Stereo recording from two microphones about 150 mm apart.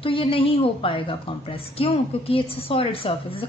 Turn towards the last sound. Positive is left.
turn(degrees=40)  # may be behind; listen again after turning